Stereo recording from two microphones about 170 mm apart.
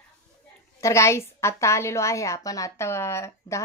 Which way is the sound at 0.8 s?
15° left (ahead or behind).